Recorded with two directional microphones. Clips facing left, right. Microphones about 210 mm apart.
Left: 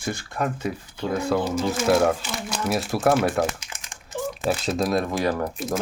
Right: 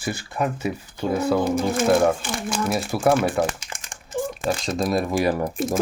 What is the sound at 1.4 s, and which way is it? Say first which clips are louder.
Speech: right 3 dB; 55° right (ahead or behind).